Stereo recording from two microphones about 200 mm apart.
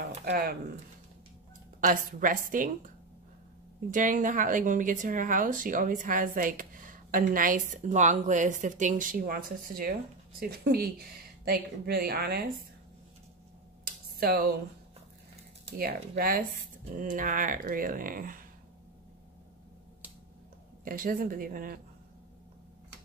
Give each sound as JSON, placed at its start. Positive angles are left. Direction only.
{"t": 0.2, "sound": "speech", "side_deg": -50}
{"t": 1.8, "sound": "speech", "side_deg": -40}
{"t": 3.9, "sound": "speech", "side_deg": -40}
{"t": 14.2, "sound": "speech", "side_deg": -50}
{"t": 15.8, "sound": "speech", "side_deg": -45}
{"t": 20.8, "sound": "speech", "side_deg": -45}